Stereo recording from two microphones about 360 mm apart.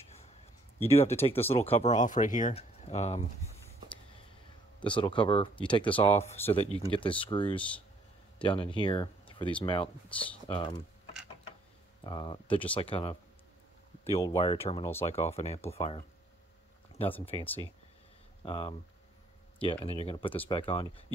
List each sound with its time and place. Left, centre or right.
0.8 s speech: centre
4.7 s speech: centre
12.0 s speech: centre
17.1 s speech: centre